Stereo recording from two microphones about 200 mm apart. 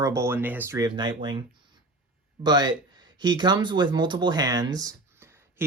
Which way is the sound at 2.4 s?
20° right (ahead or behind).